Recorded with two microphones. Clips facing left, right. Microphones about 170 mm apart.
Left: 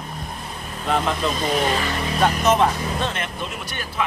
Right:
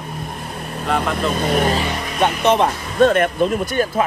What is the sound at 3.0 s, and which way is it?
Speech, 50° right (ahead or behind).